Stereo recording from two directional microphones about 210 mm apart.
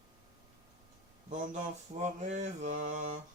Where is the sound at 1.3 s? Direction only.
35° right (ahead or behind).